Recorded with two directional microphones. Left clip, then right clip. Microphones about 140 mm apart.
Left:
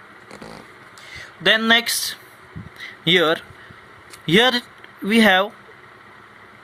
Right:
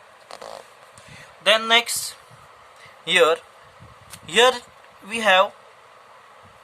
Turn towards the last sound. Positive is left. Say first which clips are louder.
# left 2 dB
turn(degrees=25)  # may be behind; listen again after turning